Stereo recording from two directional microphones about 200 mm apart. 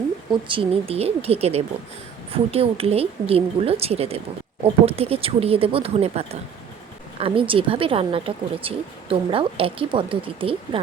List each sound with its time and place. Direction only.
0.3 s speech: 25° right (ahead or behind)